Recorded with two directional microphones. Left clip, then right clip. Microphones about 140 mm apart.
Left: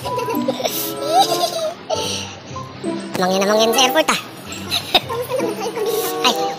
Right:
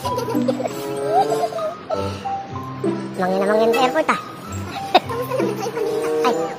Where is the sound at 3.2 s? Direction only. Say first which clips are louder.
Left 2 dB; 5° left (ahead or behind).